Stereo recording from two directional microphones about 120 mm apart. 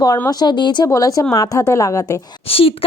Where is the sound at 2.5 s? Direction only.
50° left (ahead or behind).